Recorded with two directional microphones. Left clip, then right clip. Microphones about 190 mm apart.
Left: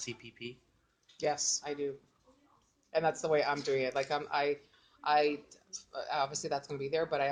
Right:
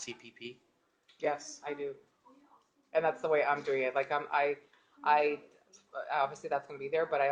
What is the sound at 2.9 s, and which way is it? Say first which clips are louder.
Speech: right 1 dB; 50° left (ahead or behind).